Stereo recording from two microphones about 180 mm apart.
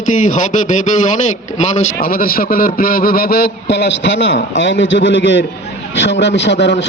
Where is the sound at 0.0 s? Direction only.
45° left (ahead or behind).